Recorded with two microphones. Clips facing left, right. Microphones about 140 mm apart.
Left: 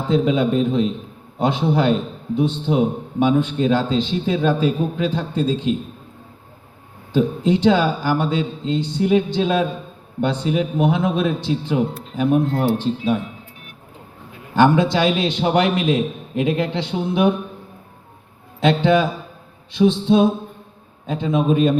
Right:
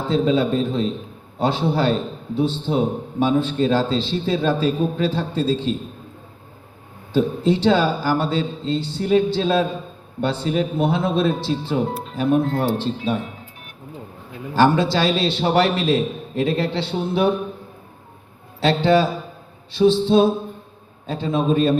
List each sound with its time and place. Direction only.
0.1 s a man's voice: 15° left (ahead or behind)
7.1 s a man's voice: 15° left (ahead or behind)
14.5 s a man's voice: 20° left (ahead or behind)
18.6 s a man's voice: 15° left (ahead or behind)